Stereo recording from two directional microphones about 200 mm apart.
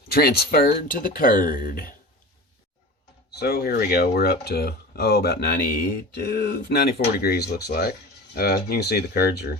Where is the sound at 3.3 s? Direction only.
55° left (ahead or behind).